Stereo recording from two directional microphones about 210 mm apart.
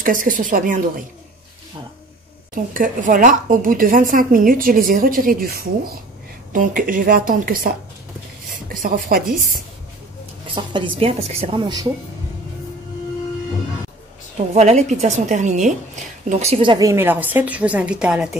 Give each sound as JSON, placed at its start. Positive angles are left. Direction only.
{"t": 0.0, "sound": "speech", "side_deg": -40}
{"t": 2.5, "sound": "speech", "side_deg": -40}
{"t": 10.5, "sound": "speech", "side_deg": -25}
{"t": 14.5, "sound": "a woman's voice", "side_deg": -30}